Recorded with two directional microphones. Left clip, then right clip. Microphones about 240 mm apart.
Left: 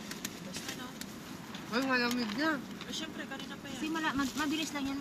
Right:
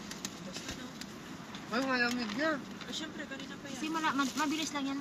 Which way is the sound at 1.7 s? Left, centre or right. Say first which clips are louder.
Even; left.